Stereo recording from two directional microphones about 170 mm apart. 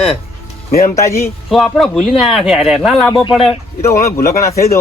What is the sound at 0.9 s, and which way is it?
Speech, 15° left (ahead or behind).